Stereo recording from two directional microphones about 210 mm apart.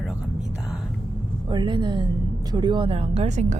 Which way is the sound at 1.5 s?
20° right (ahead or behind).